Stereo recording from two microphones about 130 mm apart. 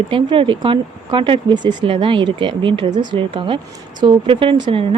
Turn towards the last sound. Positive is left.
turn(degrees=-40)  # may be behind; listen again after turning